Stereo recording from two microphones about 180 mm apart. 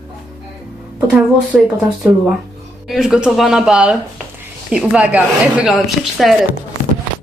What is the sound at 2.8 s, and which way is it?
Speech, centre (ahead or behind).